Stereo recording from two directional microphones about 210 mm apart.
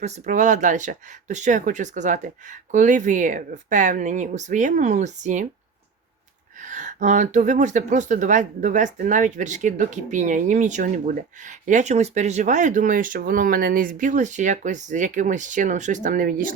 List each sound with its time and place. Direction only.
0.0 s speech: 35° right (ahead or behind)
6.6 s speech: 35° right (ahead or behind)